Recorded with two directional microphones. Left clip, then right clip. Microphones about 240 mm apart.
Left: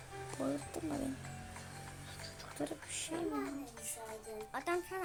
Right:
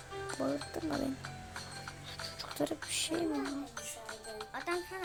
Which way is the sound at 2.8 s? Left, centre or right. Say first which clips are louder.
Right 7 dB; centre.